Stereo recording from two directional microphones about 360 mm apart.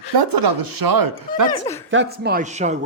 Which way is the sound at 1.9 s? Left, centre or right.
Right.